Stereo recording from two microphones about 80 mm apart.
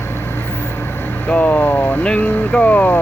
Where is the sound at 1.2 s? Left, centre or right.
Centre.